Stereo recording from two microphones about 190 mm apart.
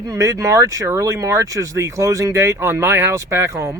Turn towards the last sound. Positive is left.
turn(degrees=-15)  # may be behind; listen again after turning